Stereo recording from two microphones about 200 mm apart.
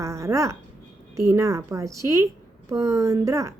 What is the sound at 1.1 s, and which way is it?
A woman's voice, 15° right (ahead or behind).